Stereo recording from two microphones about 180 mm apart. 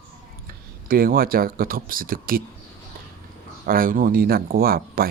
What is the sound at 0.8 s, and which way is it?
Speech, 55° right (ahead or behind).